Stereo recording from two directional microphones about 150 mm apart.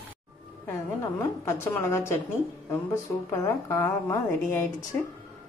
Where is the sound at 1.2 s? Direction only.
20° left (ahead or behind).